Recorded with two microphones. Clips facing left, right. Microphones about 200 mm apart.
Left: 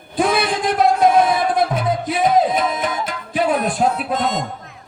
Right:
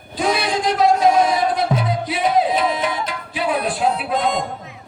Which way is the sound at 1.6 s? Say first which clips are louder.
Left 2 dB; 50° left (ahead or behind).